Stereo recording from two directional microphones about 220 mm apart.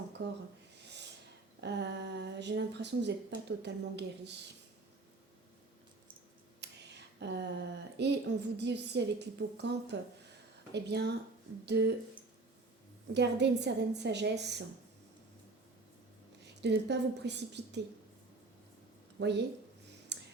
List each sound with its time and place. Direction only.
0.2 s speech: 50° right (ahead or behind)
0.8 s snort: 50° right (ahead or behind)
1.6 s speech: 50° right (ahead or behind)
6.6 s a sound: 50° right (ahead or behind)
7.9 s speech: 50° right (ahead or behind)
13.1 s speech: 50° right (ahead or behind)
16.4 s a woman's voice: 50° right (ahead or behind)
19.2 s speech: 50° right (ahead or behind)
20.1 s clicking: 50° right (ahead or behind)